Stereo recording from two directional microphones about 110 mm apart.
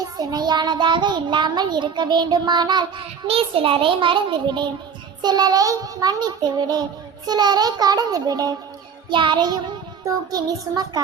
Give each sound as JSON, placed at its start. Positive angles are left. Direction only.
{"t": 0.0, "sound": "child singing", "side_deg": -35}
{"t": 3.2, "sound": "a child's voice", "side_deg": -60}
{"t": 5.2, "sound": "child singing", "side_deg": -40}
{"t": 9.0, "sound": "a child's voice", "side_deg": -45}
{"t": 10.0, "sound": "child singing", "side_deg": -35}